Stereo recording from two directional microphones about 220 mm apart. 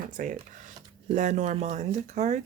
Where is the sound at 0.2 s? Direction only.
35° right (ahead or behind).